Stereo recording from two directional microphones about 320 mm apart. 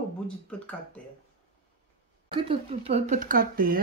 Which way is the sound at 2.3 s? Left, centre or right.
Centre.